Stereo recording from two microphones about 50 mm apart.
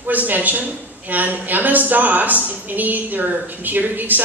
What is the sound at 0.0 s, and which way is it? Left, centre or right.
A woman's voice, right.